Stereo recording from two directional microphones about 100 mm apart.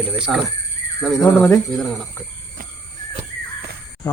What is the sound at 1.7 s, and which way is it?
Speech, centre (ahead or behind).